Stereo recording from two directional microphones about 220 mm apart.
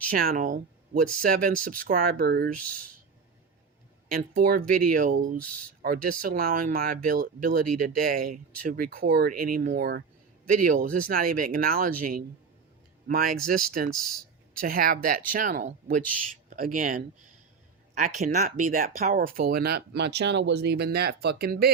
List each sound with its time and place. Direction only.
0.1 s speech: 40° right (ahead or behind)
4.1 s speech: 40° right (ahead or behind)
13.1 s speech: 40° right (ahead or behind)
13.9 s a sound: centre (ahead or behind)
14.6 s speech: 40° right (ahead or behind)
18.3 s speech: 35° right (ahead or behind)